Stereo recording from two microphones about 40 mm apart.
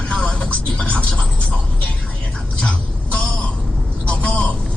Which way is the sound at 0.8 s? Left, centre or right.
Left.